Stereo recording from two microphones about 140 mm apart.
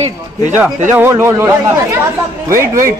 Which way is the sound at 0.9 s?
15° right (ahead or behind).